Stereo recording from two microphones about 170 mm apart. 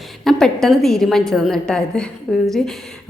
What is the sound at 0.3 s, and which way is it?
A woman's voice, centre (ahead or behind).